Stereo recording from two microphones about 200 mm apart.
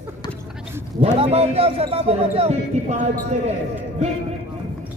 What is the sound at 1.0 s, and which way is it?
A man's voice, 30° right (ahead or behind).